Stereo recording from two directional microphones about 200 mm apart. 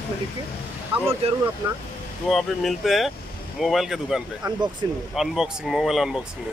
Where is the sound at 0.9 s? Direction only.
25° right (ahead or behind).